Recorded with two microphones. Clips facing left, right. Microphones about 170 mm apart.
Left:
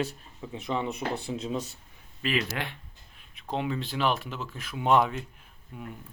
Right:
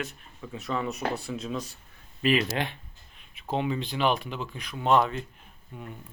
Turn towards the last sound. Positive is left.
turn(degrees=5)  # may be behind; listen again after turning